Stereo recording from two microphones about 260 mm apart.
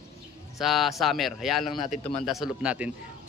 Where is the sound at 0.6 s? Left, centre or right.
Centre.